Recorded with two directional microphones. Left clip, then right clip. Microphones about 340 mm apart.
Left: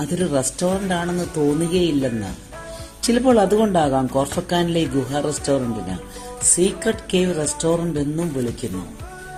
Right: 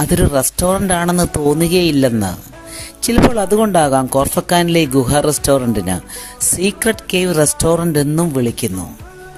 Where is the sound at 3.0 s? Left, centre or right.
Right.